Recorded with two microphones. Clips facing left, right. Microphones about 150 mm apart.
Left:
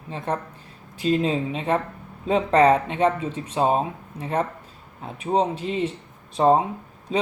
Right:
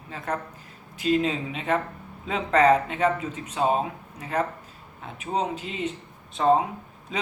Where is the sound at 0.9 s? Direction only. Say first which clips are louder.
Left 2 dB; 35° left (ahead or behind).